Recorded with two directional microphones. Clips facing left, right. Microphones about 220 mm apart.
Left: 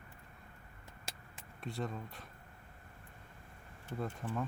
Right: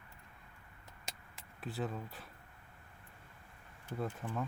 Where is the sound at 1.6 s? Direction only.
5° right (ahead or behind).